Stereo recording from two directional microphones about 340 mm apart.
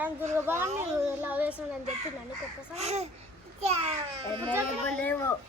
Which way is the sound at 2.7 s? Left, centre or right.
Centre.